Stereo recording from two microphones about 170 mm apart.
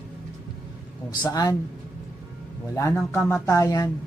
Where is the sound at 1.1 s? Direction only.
25° left (ahead or behind).